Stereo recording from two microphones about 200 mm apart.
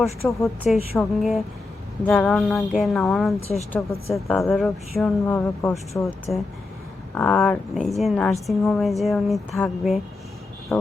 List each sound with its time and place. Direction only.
0.3 s a woman's voice: centre (ahead or behind)